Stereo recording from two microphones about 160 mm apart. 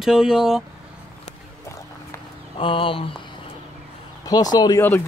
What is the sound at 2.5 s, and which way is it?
Speech, 35° left (ahead or behind).